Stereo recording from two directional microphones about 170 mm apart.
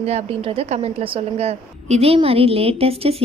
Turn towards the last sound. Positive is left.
turn(degrees=-35)  # may be behind; listen again after turning